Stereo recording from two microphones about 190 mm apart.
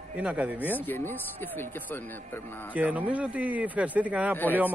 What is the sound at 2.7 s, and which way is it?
Speech, 10° right (ahead or behind).